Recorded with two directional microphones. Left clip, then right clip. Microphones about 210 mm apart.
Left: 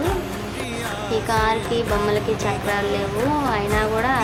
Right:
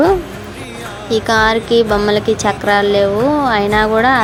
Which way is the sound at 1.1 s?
35° right (ahead or behind).